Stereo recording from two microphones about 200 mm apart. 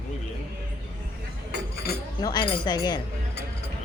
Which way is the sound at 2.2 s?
20° left (ahead or behind).